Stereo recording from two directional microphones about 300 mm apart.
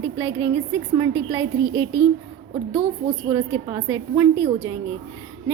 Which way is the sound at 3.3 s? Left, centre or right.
Centre.